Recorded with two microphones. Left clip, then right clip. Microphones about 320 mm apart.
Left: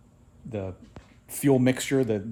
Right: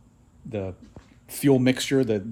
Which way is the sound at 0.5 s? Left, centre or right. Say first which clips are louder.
Right 3 dB; centre.